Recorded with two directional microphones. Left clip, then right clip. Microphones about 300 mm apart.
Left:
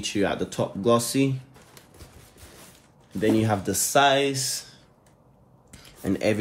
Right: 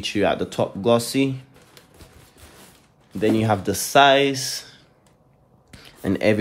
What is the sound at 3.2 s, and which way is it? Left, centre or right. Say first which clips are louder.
Speech: right 3 dB; right.